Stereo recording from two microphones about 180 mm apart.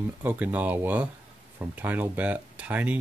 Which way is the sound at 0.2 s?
10° right (ahead or behind).